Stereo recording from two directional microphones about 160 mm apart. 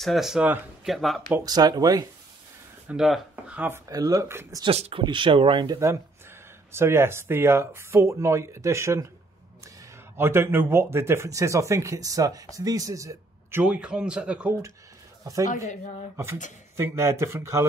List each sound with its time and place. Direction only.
0.0 s speech: centre (ahead or behind)
1.3 s speech: 25° right (ahead or behind)
2.9 s speech: 5° right (ahead or behind)
3.9 s speech: 20° right (ahead or behind)
4.6 s speech: 40° right (ahead or behind); by 9.0 s 20° right (ahead or behind)
10.1 s speech: 15° right (ahead or behind)
16.7 s speech: 20° right (ahead or behind)